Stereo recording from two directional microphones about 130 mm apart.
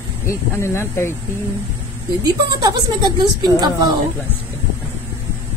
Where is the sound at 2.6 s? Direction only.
35° right (ahead or behind).